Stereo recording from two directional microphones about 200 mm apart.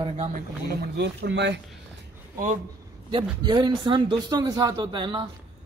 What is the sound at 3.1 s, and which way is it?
A man's voice, 25° right (ahead or behind).